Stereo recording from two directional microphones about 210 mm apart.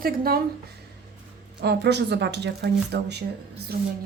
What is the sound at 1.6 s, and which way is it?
A woman's voice, 55° right (ahead or behind).